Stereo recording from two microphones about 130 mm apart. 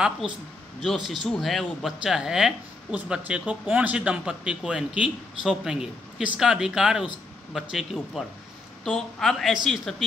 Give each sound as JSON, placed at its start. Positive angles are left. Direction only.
{"t": 0.7, "sound": "speech", "side_deg": 0}